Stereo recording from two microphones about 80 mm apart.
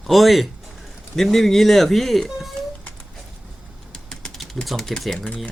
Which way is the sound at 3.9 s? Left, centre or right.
Centre.